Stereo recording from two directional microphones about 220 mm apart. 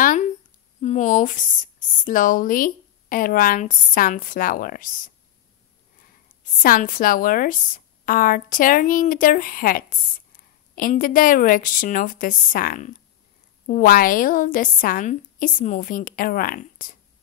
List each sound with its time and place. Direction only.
0.7 s a woman's voice: 35° left (ahead or behind)
6.6 s a woman's voice: 40° left (ahead or behind)